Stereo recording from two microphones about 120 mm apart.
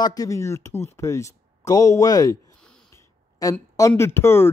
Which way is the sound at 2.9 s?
25° left (ahead or behind).